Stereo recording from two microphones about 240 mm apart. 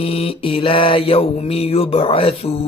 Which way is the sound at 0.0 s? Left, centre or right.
Left.